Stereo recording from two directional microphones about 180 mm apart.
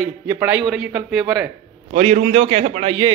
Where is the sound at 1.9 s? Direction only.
40° right (ahead or behind).